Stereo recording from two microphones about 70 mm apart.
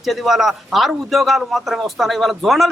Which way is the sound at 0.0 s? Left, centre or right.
Centre.